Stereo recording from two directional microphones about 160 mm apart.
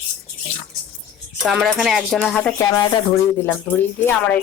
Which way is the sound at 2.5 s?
20° left (ahead or behind).